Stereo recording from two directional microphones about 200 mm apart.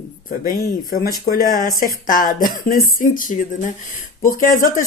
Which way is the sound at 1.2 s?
45° left (ahead or behind).